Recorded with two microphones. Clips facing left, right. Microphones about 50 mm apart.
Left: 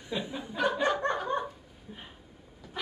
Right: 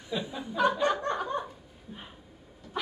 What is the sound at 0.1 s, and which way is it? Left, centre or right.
Chuckle, centre.